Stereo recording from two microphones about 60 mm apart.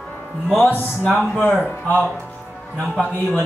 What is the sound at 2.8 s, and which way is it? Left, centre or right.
Speech, centre.